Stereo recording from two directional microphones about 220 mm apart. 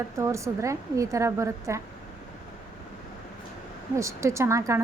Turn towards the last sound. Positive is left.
turn(degrees=-15)  # may be behind; listen again after turning